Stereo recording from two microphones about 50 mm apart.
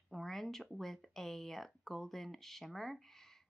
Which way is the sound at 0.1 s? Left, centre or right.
Centre.